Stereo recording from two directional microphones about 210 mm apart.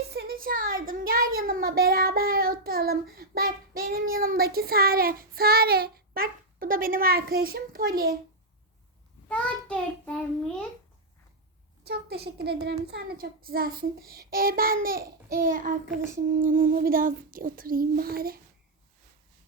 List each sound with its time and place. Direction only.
0.1 s a child's voice: 50° right (ahead or behind)
9.3 s a child's voice: 5° left (ahead or behind)
11.8 s child singing: 50° right (ahead or behind)